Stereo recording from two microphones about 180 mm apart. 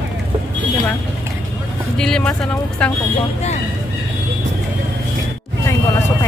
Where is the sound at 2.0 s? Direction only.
5° left (ahead or behind).